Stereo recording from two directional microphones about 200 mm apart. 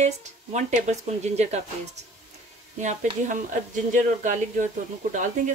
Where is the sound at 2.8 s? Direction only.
40° right (ahead or behind).